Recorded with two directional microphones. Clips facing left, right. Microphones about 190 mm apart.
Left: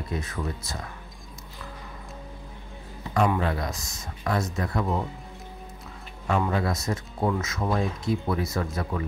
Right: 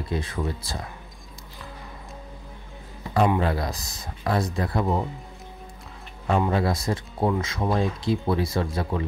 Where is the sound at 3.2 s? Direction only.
30° right (ahead or behind).